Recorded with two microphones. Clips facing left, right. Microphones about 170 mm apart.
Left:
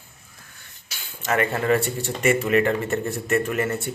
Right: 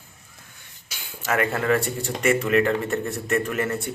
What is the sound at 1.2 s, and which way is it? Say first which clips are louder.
Speech: left 1 dB; centre (ahead or behind).